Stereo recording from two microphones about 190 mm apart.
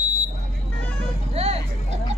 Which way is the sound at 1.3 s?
35° right (ahead or behind).